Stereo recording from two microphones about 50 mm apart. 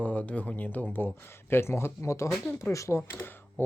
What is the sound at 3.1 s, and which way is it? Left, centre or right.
Speech, left.